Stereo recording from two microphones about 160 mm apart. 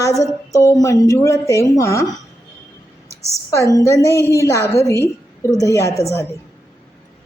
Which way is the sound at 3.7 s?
20° left (ahead or behind).